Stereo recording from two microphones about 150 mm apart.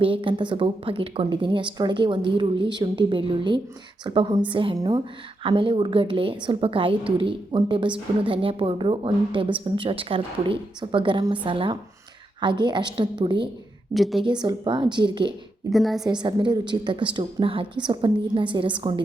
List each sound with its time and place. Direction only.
0.0 s a woman's voice: 35° right (ahead or behind)
13.9 s a woman's voice: centre (ahead or behind)
14.3 s a woman's voice: 30° right (ahead or behind)
15.7 s a woman's voice: centre (ahead or behind)
16.0 s a woman's voice: 30° right (ahead or behind)